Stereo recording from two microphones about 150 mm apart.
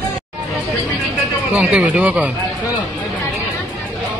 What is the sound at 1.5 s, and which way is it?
Speech, 10° right (ahead or behind).